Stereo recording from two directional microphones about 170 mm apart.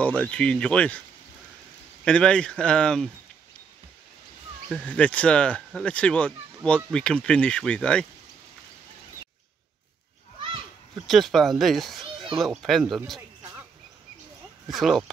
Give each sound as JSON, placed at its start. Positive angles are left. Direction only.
{"t": 0.0, "sound": "speech", "side_deg": 5}
{"t": 2.0, "sound": "speech", "side_deg": 5}
{"t": 4.6, "sound": "speech", "side_deg": 5}
{"t": 11.1, "sound": "speech", "side_deg": 0}
{"t": 14.7, "sound": "speech", "side_deg": 0}